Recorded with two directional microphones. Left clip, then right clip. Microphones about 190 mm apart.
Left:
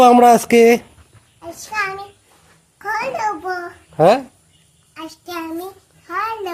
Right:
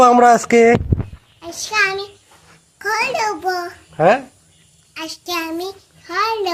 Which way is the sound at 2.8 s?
10° left (ahead or behind).